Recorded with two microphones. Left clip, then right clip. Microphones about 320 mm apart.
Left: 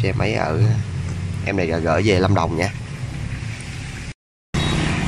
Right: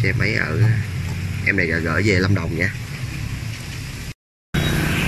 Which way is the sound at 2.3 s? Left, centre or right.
Left.